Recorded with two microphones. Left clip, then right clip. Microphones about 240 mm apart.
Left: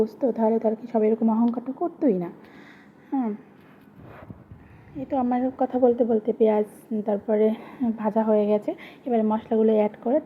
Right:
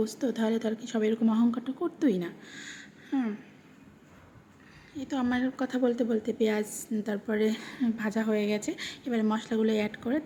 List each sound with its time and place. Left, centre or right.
0.0 s a woman's voice: centre
1.2 s speech: right
2.0 s a woman's voice: centre
5.1 s a woman's voice: centre
8.7 s a woman's voice: centre